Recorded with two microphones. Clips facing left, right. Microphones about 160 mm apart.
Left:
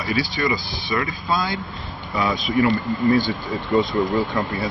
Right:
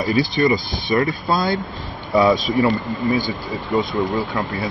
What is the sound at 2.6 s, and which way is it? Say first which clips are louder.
Speech: even; 20° right (ahead or behind).